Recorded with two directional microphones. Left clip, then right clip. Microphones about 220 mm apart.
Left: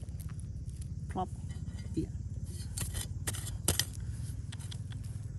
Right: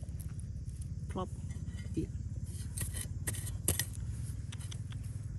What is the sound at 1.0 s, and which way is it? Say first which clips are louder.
Sheep: left 4 dB; 35° left (ahead or behind).